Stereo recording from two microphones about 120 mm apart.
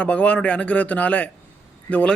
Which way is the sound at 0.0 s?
10° left (ahead or behind).